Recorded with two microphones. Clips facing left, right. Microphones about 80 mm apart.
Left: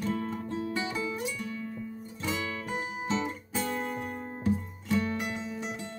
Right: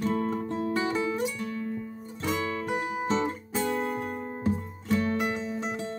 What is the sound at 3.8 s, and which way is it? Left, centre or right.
Music, right.